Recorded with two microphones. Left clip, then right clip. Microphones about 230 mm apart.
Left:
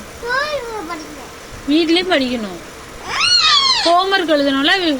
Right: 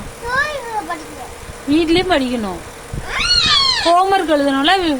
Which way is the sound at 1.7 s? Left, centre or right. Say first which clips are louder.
Even; centre.